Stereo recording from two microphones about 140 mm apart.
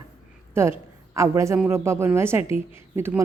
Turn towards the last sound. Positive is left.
turn(degrees=-15)  # may be behind; listen again after turning